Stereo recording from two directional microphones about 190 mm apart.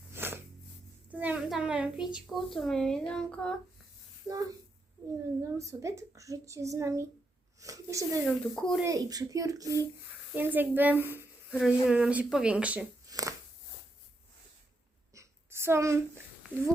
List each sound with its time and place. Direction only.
0.1 s a sound: 10° right (ahead or behind)
1.1 s a child's voice: 10° right (ahead or behind)
4.3 s a woman's voice: 15° right (ahead or behind)
8.3 s a child's voice: 5° left (ahead or behind)
8.8 s a woman's voice: 20° right (ahead or behind)
13.1 s shuffling cards: 20° right (ahead or behind)
15.1 s a sound: 15° right (ahead or behind)